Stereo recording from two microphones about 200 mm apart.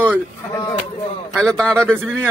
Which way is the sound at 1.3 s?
5° left (ahead or behind).